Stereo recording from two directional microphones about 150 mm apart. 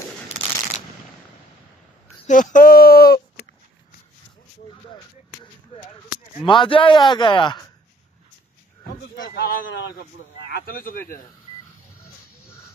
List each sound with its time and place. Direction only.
2.2 s a sound: 55° left (ahead or behind); by 3.4 s 90° left
6.4 s speech: 35° left (ahead or behind)
8.8 s a man's voice: 75° left (ahead or behind)